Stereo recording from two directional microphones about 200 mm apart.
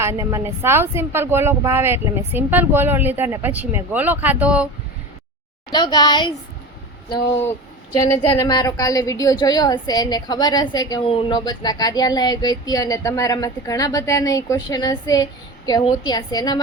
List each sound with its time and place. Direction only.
0.0 s speech: 15° right (ahead or behind)
5.7 s a woman's voice: 20° left (ahead or behind)
7.9 s a woman's voice: 15° left (ahead or behind)